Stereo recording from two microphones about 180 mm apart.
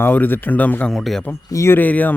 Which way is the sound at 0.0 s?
10° left (ahead or behind).